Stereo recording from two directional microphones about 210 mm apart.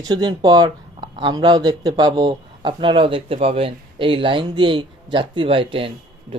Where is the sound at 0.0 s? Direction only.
20° right (ahead or behind).